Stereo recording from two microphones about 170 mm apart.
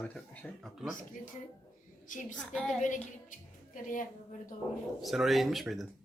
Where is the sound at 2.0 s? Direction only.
50° left (ahead or behind).